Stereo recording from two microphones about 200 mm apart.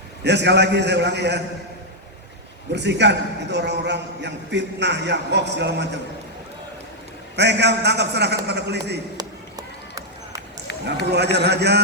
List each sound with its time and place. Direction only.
0.3 s a man's voice: 60° right (ahead or behind)
2.7 s a man's voice: 60° right (ahead or behind)
7.3 s a man's voice: 60° right (ahead or behind)
9.1 s run: 15° right (ahead or behind)
11.1 s a man's voice: 55° right (ahead or behind)